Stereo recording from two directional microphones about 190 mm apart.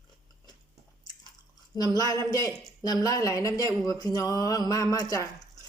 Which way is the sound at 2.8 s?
20° left (ahead or behind).